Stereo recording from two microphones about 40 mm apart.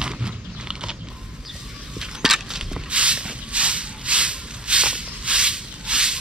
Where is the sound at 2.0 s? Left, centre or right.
Centre.